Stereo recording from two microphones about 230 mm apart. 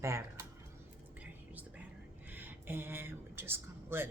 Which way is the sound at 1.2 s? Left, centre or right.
Centre.